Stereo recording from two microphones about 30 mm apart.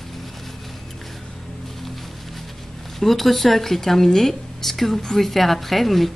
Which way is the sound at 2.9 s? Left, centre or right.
Centre.